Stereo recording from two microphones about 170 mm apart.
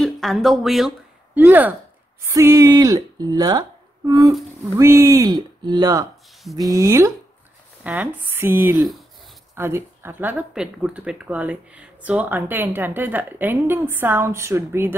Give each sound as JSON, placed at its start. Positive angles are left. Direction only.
{"t": 0.0, "sound": "speech", "side_deg": 0}